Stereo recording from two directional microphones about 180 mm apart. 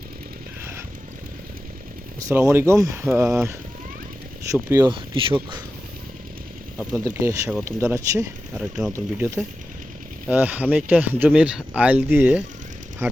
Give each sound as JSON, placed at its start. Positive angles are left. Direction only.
{"t": 2.1, "sound": "speech", "side_deg": -15}
{"t": 4.5, "sound": "speech", "side_deg": -15}
{"t": 4.9, "sound": "speech", "side_deg": -30}
{"t": 6.9, "sound": "speech", "side_deg": -15}
{"t": 8.5, "sound": "speech", "side_deg": -5}